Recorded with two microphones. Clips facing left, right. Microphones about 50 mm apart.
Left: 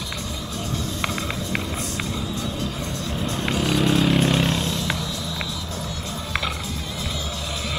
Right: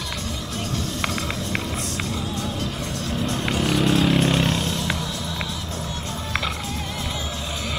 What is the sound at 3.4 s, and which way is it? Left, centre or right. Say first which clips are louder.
Vehicle: left 1 dB; centre.